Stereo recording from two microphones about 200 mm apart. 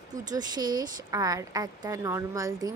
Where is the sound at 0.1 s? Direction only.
20° right (ahead or behind).